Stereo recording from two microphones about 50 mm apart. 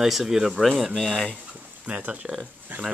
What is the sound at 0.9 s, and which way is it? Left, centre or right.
Speech, centre.